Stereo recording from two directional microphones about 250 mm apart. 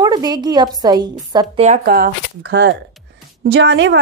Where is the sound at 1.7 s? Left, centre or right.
Right.